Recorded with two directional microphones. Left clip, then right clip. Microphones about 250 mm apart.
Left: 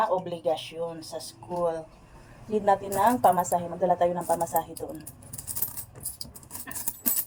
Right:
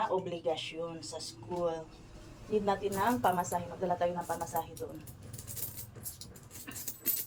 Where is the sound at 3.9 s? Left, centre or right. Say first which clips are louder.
Left 8 dB; left.